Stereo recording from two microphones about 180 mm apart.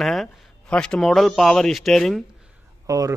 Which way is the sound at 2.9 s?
20° right (ahead or behind).